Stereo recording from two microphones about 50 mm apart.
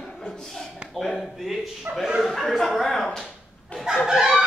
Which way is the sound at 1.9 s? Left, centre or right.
Right.